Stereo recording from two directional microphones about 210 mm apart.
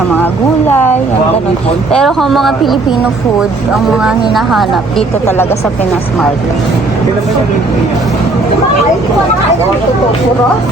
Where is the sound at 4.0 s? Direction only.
Centre (ahead or behind).